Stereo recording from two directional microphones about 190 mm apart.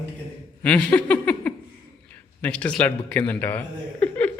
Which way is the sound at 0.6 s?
5° left (ahead or behind).